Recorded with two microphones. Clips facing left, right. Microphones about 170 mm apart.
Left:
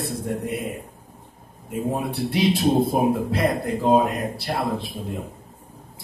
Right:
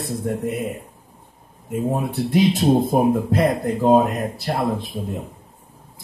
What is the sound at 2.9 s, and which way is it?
Speech, 45° right (ahead or behind).